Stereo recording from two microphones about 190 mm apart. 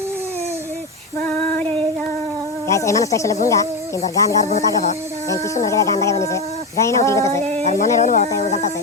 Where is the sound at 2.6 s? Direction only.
15° left (ahead or behind).